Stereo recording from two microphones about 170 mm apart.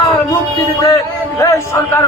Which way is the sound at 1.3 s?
20° left (ahead or behind).